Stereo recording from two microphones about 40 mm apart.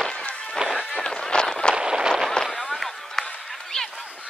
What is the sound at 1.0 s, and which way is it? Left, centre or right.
Run, centre.